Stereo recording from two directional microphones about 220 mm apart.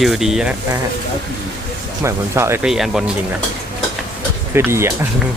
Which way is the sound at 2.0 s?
10° right (ahead or behind).